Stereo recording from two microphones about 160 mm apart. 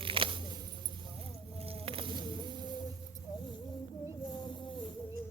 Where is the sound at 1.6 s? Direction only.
35° right (ahead or behind).